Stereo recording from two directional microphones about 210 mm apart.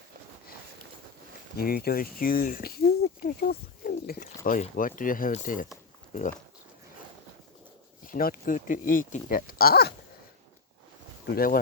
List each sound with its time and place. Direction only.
1.5 s speech: 45° left (ahead or behind)
8.0 s speech: 40° left (ahead or behind)
11.3 s speech: 45° left (ahead or behind)